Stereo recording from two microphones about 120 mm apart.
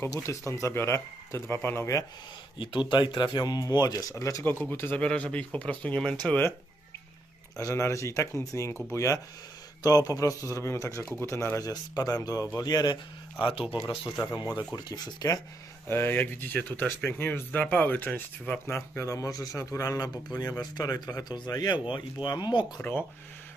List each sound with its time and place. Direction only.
0.0 s speech: 25° left (ahead or behind)
2.6 s speech: 40° left (ahead or behind); by 6.5 s 10° left (ahead or behind)
7.5 s speech: 25° left (ahead or behind)
13.5 s speech: 50° left (ahead or behind)
14.3 s speech: 35° left (ahead or behind)
15.9 s speech: 20° left (ahead or behind); by 22.6 s 35° left (ahead or behind)